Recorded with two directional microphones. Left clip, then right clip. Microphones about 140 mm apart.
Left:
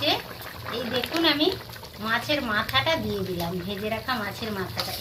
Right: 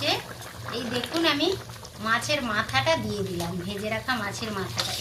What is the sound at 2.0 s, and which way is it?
Speech, 40° left (ahead or behind).